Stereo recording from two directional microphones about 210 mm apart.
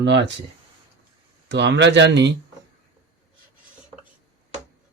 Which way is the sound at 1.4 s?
55° right (ahead or behind).